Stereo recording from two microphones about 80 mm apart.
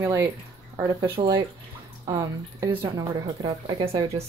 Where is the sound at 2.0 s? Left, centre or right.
Right.